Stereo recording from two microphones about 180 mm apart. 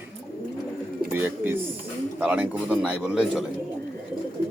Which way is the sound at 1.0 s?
10° right (ahead or behind).